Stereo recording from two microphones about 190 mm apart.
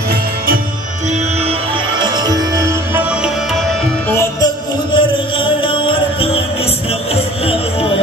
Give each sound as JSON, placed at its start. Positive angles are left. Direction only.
{"t": 2.0, "sound": "music", "side_deg": -20}
{"t": 4.9, "sound": "music", "side_deg": 25}